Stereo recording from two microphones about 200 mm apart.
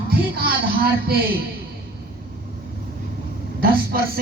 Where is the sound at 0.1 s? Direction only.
50° right (ahead or behind).